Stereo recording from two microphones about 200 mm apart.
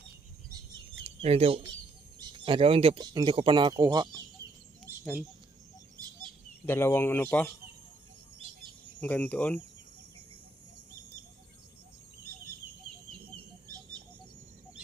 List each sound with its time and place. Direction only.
1.2 s speech: 30° right (ahead or behind)
6.7 s speech: 10° left (ahead or behind)
9.0 s speech: 10° left (ahead or behind)
13.3 s a sound: 20° right (ahead or behind)